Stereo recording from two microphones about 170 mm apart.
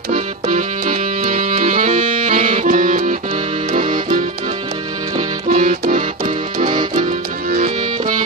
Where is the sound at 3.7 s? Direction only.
50° right (ahead or behind).